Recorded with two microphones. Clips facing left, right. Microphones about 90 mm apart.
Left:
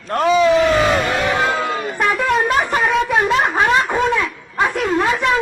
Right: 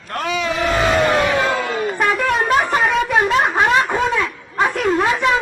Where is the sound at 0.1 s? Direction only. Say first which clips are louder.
Left 8 dB; 30° left (ahead or behind).